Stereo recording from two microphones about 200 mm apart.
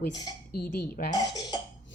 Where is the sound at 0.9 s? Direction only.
20° left (ahead or behind).